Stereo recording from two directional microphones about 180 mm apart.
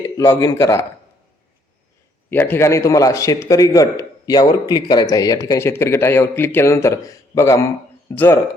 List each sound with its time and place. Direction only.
0.0 s speech: 20° left (ahead or behind)
2.3 s a man's voice: 10° left (ahead or behind)